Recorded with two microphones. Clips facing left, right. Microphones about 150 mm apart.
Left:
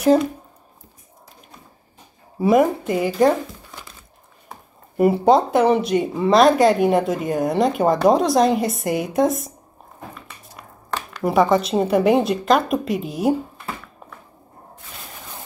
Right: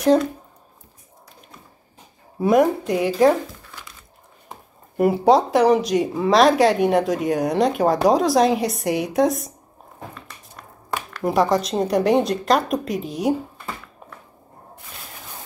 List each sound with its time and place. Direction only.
0.0 s speech: 5° left (ahead or behind)
2.3 s speech: centre (ahead or behind)
4.5 s speech: centre (ahead or behind)
11.1 s speech: centre (ahead or behind)